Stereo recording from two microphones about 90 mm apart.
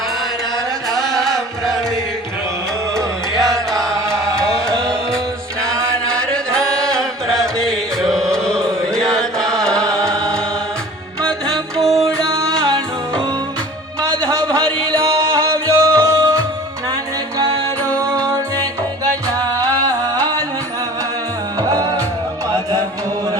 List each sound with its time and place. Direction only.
0.9 s music: 5° left (ahead or behind)
3.0 s music: 35° right (ahead or behind)
6.3 s music: 10° left (ahead or behind)
10.1 s chant: 10° left (ahead or behind)
11.2 s music: 5° left (ahead or behind)
14.0 s music: 40° right (ahead or behind)
18.3 s music: 40° right (ahead or behind)
21.7 s music: 45° right (ahead or behind)